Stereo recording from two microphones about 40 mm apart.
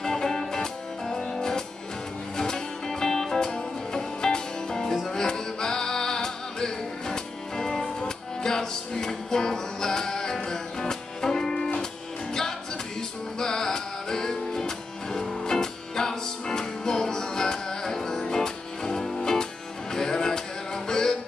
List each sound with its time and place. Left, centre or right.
0.0 s music: centre
13.4 s music: centre